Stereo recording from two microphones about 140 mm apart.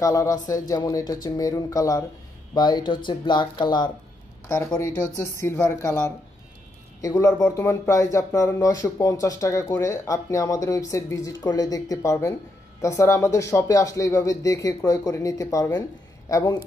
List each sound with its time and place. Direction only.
0.0 s speech: 25° left (ahead or behind)
4.5 s speech: 20° left (ahead or behind)